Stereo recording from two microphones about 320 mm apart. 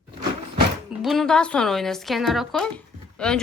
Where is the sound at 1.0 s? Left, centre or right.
Centre.